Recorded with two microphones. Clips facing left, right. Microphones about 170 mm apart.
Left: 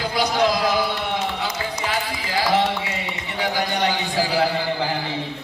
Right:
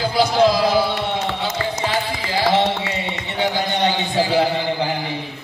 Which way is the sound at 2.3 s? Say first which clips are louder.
Right 2 dB; 25° right (ahead or behind).